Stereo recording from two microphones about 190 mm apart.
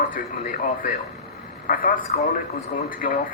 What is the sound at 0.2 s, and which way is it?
A man's voice, 50° left (ahead or behind).